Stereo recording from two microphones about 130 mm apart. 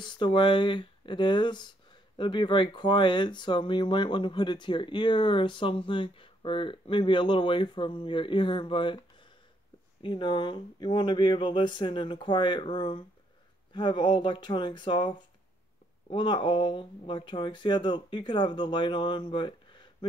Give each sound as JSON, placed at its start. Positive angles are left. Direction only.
{"t": 0.0, "sound": "speech", "side_deg": 40}